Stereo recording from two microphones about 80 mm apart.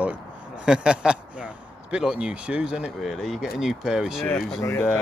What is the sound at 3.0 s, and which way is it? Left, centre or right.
Speech, centre.